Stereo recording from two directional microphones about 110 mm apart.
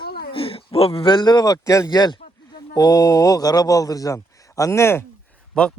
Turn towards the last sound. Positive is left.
turn(degrees=10)  # may be behind; listen again after turning